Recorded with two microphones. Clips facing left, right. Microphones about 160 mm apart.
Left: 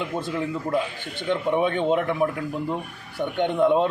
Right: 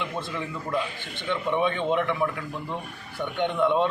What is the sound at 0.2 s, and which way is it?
Speech, 40° left (ahead or behind).